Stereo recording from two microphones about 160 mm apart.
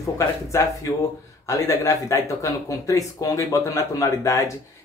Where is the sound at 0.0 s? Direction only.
20° left (ahead or behind).